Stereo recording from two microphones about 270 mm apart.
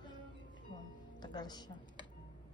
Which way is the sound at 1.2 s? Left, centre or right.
Centre.